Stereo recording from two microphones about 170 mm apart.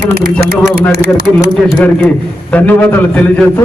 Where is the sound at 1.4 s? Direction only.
10° left (ahead or behind).